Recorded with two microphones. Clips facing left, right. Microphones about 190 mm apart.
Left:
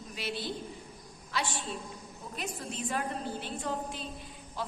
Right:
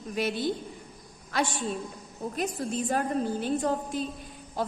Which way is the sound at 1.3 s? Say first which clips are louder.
Right 6 dB; 50° right (ahead or behind).